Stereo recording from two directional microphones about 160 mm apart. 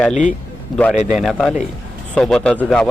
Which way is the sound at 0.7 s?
5° left (ahead or behind).